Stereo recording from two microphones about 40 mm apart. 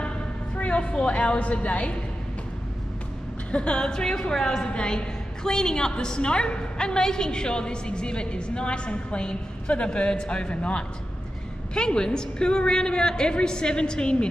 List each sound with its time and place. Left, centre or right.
0.6 s a woman's voice: left
3.5 s a woman's voice: left